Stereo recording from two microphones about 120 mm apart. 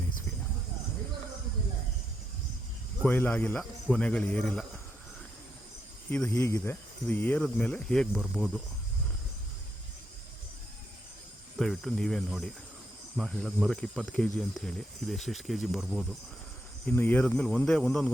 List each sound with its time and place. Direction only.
3.1 s speech: 15° left (ahead or behind)
3.6 s cricket: centre (ahead or behind)
4.0 s speech: 10° left (ahead or behind)
6.1 s speech: 15° left (ahead or behind)
11.5 s speech: centre (ahead or behind)
16.8 s speech: 15° left (ahead or behind)